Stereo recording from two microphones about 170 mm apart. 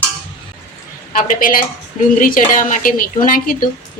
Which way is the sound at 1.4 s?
55° left (ahead or behind).